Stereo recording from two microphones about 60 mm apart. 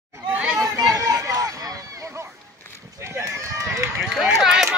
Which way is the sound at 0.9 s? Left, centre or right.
Right.